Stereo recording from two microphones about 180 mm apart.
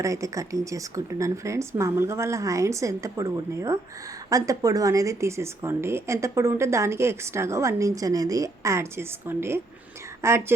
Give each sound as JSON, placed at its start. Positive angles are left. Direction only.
{"t": 0.0, "sound": "a woman's voice", "side_deg": -15}